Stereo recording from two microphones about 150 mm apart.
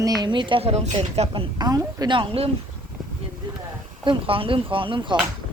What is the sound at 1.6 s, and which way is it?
Speech, 25° right (ahead or behind).